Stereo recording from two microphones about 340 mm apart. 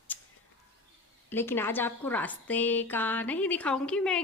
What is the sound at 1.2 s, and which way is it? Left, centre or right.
A woman's voice, centre.